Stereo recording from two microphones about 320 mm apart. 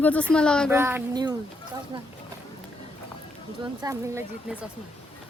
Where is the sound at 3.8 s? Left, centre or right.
Centre.